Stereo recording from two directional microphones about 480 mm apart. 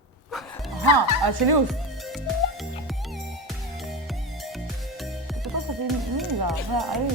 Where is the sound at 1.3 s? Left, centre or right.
Right.